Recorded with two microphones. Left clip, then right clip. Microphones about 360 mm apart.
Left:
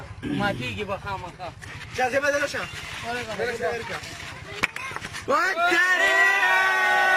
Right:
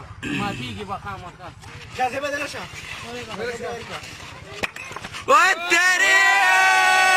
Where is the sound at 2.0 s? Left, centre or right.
Left.